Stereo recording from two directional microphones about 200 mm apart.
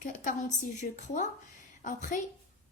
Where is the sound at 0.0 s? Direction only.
40° left (ahead or behind).